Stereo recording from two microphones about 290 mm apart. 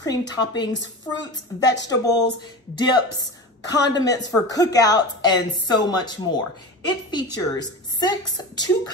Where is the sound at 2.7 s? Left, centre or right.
Centre.